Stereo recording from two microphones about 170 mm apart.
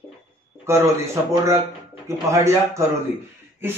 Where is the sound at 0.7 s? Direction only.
15° right (ahead or behind).